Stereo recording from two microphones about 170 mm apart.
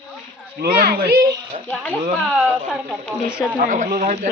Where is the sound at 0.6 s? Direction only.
60° right (ahead or behind).